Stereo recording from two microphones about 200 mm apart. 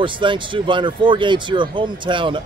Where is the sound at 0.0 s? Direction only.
25° right (ahead or behind).